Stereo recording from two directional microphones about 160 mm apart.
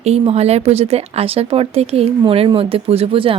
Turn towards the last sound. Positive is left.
turn(degrees=-35)  # may be behind; listen again after turning